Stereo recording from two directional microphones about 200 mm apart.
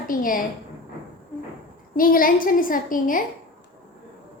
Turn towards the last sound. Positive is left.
turn(degrees=45)  # may be behind; listen again after turning